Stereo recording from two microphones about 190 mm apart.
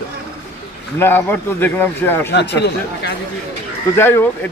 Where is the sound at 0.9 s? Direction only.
10° left (ahead or behind).